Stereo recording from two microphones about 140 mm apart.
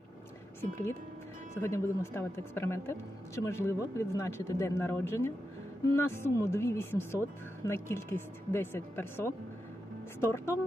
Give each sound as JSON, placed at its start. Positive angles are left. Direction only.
{"t": 1.6, "sound": "speech", "side_deg": 20}